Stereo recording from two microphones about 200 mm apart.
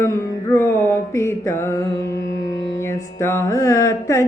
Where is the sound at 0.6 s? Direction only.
15° left (ahead or behind).